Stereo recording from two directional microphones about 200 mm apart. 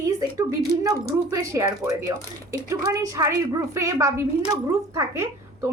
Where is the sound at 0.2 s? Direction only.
15° right (ahead or behind).